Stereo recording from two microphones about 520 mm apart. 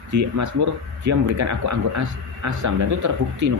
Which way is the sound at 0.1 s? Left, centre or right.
Right.